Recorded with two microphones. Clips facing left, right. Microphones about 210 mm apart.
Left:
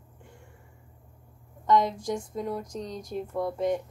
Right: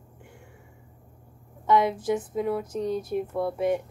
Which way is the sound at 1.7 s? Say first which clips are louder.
Right 2 dB; 5° right (ahead or behind).